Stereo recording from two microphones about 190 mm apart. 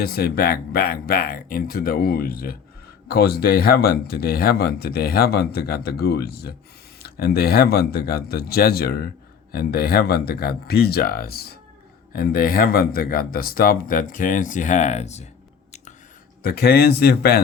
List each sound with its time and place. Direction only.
0.0 s speech: 55° left (ahead or behind); by 15.3 s 35° left (ahead or behind)
16.4 s speech: 55° left (ahead or behind)